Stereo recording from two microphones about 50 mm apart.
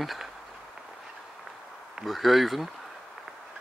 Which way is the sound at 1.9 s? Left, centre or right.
Centre.